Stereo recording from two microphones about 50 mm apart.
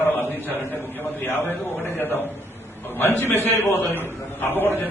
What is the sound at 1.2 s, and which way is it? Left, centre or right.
A man's voice, left.